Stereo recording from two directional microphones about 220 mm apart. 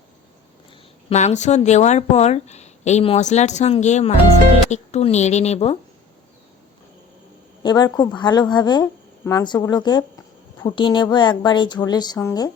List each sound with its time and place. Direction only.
1.1 s speech: 30° left (ahead or behind)
7.6 s speech: 20° left (ahead or behind)